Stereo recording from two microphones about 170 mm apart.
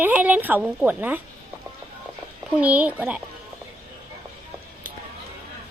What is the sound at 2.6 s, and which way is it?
Speech, 10° right (ahead or behind).